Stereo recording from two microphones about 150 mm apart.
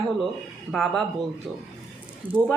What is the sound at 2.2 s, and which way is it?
Speech, 35° right (ahead or behind).